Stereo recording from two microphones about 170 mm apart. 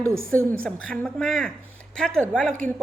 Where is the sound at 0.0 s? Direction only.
15° right (ahead or behind).